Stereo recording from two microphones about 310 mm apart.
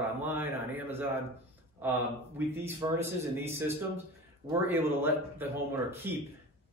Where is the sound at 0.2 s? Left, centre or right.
Centre.